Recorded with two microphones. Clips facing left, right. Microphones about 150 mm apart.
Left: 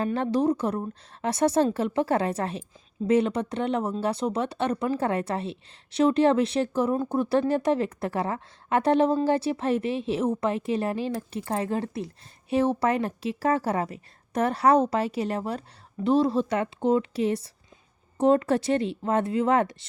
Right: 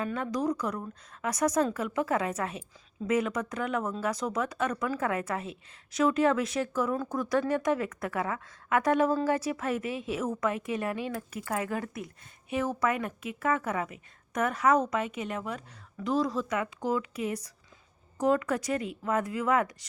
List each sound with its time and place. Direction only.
0.0 s speech: 30° left (ahead or behind)